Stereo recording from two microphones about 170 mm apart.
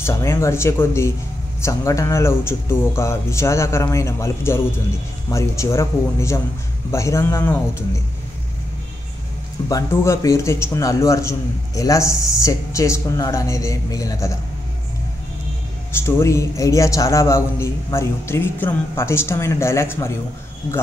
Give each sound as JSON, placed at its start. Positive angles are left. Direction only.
{"t": 0.0, "sound": "a man's voice", "side_deg": 15}
{"t": 9.7, "sound": "a man's voice", "side_deg": 20}
{"t": 15.9, "sound": "a man's voice", "side_deg": 15}